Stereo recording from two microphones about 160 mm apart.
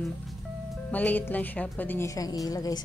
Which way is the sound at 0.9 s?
10° left (ahead or behind).